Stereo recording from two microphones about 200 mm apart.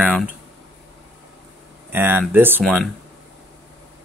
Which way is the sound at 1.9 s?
10° right (ahead or behind).